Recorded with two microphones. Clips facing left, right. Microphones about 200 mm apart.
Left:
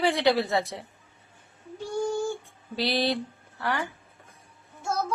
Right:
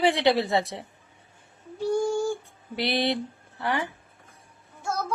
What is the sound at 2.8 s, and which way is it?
Speech, 20° right (ahead or behind).